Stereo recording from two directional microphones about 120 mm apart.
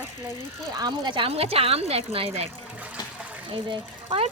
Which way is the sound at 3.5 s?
50° right (ahead or behind).